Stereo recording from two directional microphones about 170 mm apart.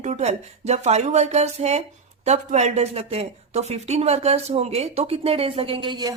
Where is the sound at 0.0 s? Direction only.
45° right (ahead or behind).